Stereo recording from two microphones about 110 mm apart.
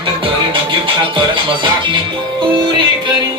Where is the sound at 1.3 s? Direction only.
45° right (ahead or behind).